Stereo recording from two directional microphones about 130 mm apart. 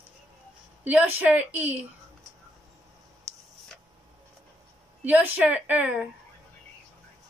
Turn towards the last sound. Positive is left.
turn(degrees=-10)  # may be behind; listen again after turning